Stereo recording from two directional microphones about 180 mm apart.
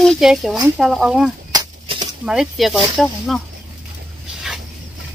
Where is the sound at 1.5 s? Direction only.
25° right (ahead or behind).